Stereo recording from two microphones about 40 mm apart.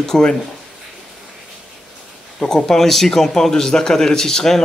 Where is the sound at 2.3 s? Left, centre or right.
Centre.